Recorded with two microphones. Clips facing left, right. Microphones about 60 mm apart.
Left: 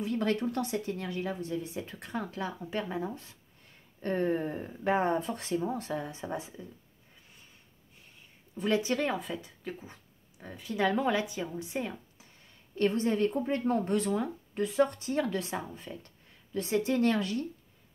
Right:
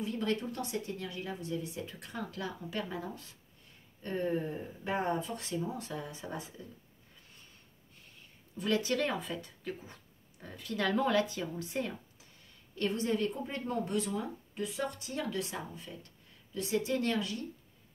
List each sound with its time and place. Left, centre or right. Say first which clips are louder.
0.1 s speech: left 7 dB; left
4.0 s speech: left 4 dB; left
6.2 s speech: left 4 dB; left
8.5 s speech: left 2 dB; left
9.1 s speech: left 2 dB; centre
12.7 s speech: left 4 dB; left